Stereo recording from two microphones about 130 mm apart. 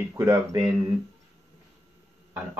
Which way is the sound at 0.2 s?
25° right (ahead or behind).